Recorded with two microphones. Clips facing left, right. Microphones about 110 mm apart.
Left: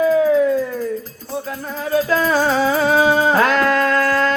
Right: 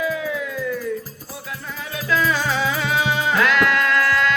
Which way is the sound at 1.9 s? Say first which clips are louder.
Left 5 dB; 40° left (ahead or behind).